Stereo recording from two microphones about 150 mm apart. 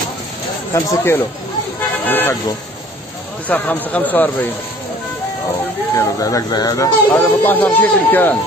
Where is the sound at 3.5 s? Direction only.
10° left (ahead or behind).